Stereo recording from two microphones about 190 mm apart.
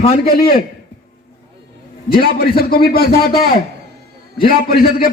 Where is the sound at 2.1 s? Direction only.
55° left (ahead or behind).